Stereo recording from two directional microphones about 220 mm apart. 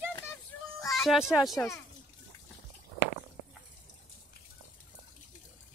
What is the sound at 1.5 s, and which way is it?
Speech, 10° left (ahead or behind).